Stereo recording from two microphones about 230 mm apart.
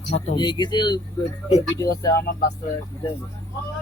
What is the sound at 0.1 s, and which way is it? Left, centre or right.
Speech, left.